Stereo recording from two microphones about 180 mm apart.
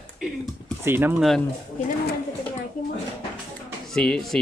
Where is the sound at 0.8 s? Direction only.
10° right (ahead or behind).